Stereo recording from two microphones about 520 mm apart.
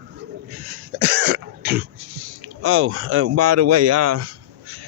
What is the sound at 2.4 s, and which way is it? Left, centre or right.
Speech, right.